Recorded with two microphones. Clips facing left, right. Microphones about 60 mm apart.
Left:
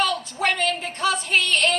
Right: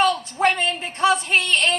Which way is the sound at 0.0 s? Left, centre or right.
Right.